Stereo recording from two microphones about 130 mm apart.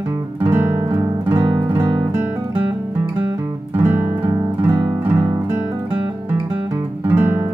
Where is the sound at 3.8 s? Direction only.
15° right (ahead or behind).